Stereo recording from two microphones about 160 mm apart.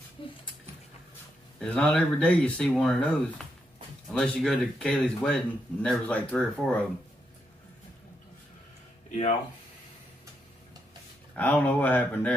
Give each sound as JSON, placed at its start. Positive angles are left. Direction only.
{"t": 0.2, "sound": "a sound", "side_deg": 35}
{"t": 1.6, "sound": "speech", "side_deg": 5}
{"t": 11.3, "sound": "speech", "side_deg": 10}